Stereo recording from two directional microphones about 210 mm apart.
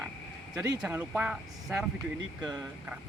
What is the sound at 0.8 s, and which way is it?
Speech, 5° right (ahead or behind).